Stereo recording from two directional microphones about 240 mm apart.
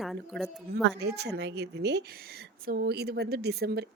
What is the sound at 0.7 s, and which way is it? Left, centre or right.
Speech, right.